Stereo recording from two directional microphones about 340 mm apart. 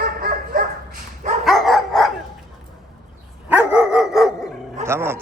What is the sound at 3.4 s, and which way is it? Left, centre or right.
Dog, centre.